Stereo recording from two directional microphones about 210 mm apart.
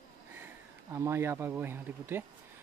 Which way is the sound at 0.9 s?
15° right (ahead or behind).